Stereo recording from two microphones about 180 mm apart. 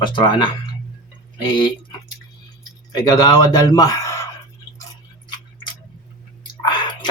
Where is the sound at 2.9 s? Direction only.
20° left (ahead or behind).